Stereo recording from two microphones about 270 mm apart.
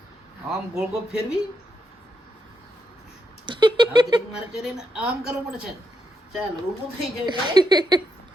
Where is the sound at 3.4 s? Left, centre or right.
Centre.